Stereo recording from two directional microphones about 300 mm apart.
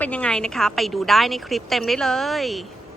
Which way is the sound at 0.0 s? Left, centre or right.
Centre.